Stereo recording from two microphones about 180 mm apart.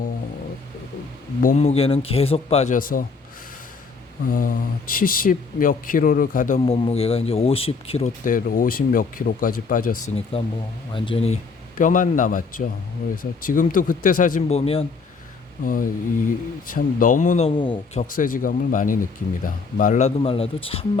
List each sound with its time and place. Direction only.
1.4 s speech: 45° left (ahead or behind)
2.7 s speech: 50° left (ahead or behind)
4.3 s speech: 50° left (ahead or behind)
6.7 s speech: 35° left (ahead or behind)
8.2 s speech: 50° left (ahead or behind)
10.3 s speech: 30° left (ahead or behind)
11.8 s speech: 45° left (ahead or behind)
15.6 s speech: 50° left (ahead or behind)
17.6 s speech: 25° left (ahead or behind)
18.0 s speech: 50° left (ahead or behind); by 20.8 s 30° left (ahead or behind)